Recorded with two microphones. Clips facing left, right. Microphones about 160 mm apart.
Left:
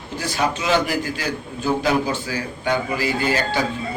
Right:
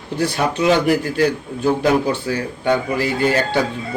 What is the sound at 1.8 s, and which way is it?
A man's voice, 60° right (ahead or behind).